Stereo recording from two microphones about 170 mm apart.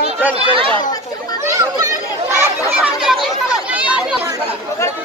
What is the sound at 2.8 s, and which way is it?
Chatter, 5° right (ahead or behind).